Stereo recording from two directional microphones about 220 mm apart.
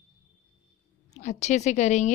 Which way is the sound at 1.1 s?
30° left (ahead or behind).